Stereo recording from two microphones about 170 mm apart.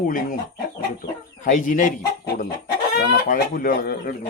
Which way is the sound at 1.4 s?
50° left (ahead or behind).